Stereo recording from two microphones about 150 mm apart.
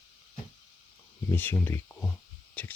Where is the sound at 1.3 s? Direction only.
15° left (ahead or behind).